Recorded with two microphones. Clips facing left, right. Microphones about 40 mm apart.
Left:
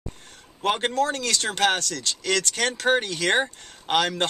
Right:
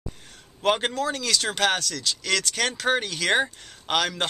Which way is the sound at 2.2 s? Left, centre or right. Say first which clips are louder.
Left 2 dB; centre.